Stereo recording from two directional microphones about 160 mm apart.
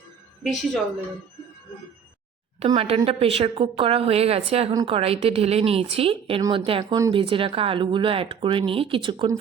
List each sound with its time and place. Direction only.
0.4 s a woman's voice: centre (ahead or behind)
2.6 s speech: 35° right (ahead or behind)